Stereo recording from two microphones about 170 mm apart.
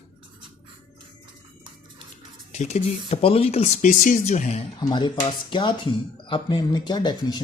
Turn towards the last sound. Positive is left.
turn(degrees=25)  # may be behind; listen again after turning